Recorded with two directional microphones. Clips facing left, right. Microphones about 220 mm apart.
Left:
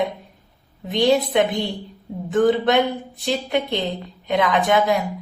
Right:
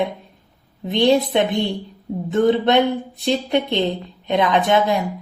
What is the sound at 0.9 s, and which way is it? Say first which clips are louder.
Speech: right 2 dB; 25° right (ahead or behind).